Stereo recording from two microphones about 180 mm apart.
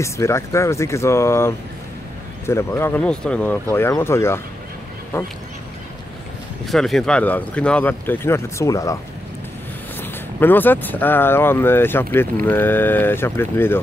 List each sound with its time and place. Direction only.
0.0 s speech: 15° left (ahead or behind)
6.6 s speech: centre (ahead or behind); by 8.9 s 20° left (ahead or behind)
10.4 s speech: 10° left (ahead or behind)